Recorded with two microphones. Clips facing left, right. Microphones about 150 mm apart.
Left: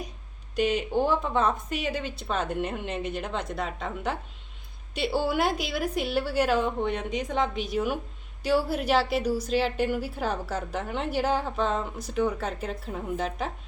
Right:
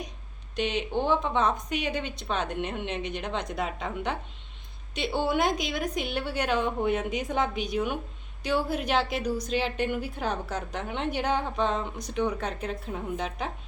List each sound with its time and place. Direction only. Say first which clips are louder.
0.5 s a woman's voice: left 3 dB; 10° left (ahead or behind)